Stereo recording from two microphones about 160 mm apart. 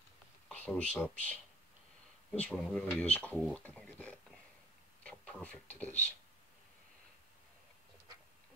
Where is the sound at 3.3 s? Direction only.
5° left (ahead or behind).